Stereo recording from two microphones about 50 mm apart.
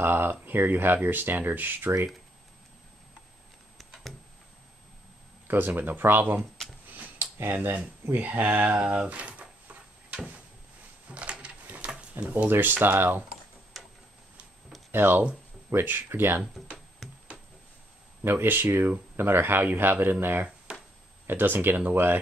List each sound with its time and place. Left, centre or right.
0.0 s speech: right
5.8 s speech: right
6.9 s tick-tock: right
7.3 s speech: right
8.2 s speech: right
8.7 s speech: right
11.1 s a sound: right
12.3 s speech: right
14.9 s speech: right
15.7 s speech: right
17.0 s a sound: centre
18.2 s speech: right
20.7 s a sound: right
21.3 s speech: right